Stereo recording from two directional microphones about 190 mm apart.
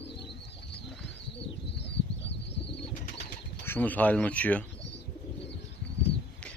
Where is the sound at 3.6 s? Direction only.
10° left (ahead or behind).